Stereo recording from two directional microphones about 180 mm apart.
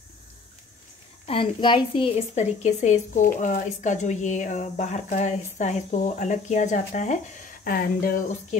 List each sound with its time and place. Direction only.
1.2 s a woman's voice: 30° left (ahead or behind); by 8.2 s 55° left (ahead or behind)